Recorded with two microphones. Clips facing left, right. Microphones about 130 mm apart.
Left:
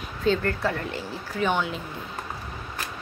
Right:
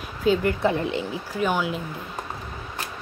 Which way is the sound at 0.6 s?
20° right (ahead or behind).